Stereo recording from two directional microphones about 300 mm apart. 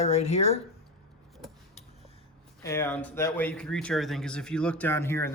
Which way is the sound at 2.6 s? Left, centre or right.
Centre.